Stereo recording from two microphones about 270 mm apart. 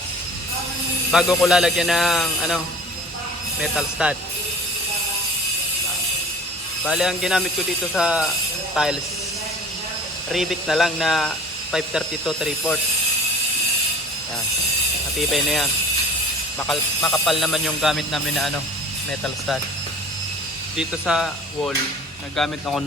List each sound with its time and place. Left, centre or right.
1.1 s speech: centre
3.6 s speech: centre
6.8 s speech: centre
10.3 s speech: centre
15.2 s speech: centre
20.7 s speech: centre